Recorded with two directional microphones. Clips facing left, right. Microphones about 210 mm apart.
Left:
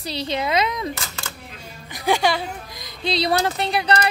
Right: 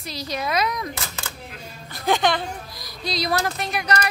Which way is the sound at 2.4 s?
20° left (ahead or behind).